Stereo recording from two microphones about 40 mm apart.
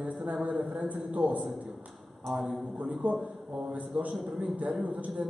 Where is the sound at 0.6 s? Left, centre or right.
Right.